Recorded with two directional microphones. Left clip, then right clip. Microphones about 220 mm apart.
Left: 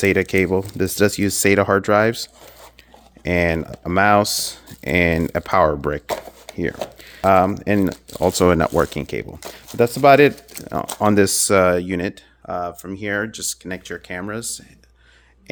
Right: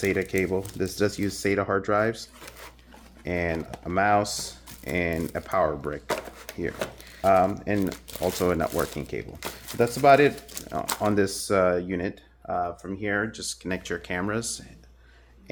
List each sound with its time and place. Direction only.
0.0 s speech: 50° left (ahead or behind)
7.2 s speech: 50° left (ahead or behind)
13.7 s speech: 15° left (ahead or behind)